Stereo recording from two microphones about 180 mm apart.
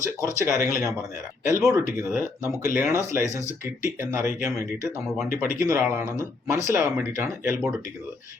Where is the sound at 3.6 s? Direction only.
15° right (ahead or behind).